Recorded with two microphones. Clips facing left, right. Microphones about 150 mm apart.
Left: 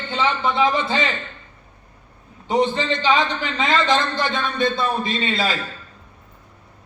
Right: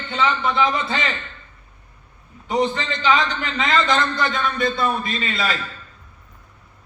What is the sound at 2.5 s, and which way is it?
A man's voice, 30° left (ahead or behind).